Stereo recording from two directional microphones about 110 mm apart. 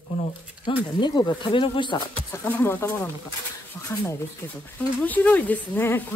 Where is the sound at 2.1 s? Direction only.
20° left (ahead or behind).